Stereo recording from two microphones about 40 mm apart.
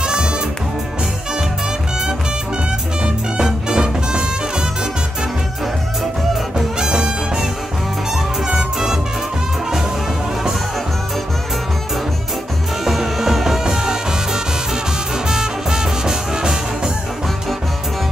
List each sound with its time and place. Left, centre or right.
0.0 s music: centre
3.0 s music: centre
6.8 s music: centre
12.8 s music: centre